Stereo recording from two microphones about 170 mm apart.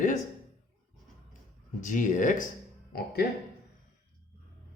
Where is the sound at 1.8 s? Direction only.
50° left (ahead or behind).